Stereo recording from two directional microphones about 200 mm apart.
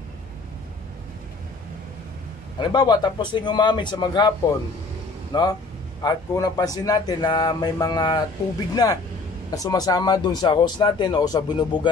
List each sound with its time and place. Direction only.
2.6 s speech: 20° left (ahead or behind)
5.3 s speech: 20° left (ahead or behind)